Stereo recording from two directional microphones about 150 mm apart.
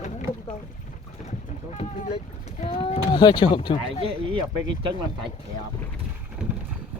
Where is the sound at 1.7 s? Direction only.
50° left (ahead or behind).